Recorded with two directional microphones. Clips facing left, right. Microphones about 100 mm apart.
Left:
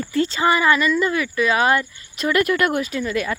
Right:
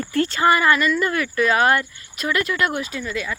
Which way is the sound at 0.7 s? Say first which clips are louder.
Left 1 dB; 5° left (ahead or behind).